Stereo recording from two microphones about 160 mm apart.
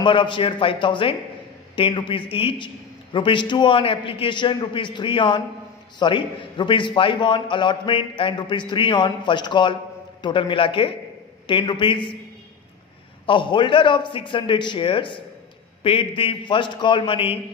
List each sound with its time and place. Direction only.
0.0 s a man's voice: 30° left (ahead or behind)
13.3 s a man's voice: 30° left (ahead or behind)